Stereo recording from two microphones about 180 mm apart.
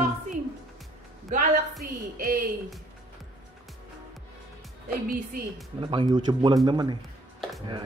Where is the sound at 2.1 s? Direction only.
50° right (ahead or behind).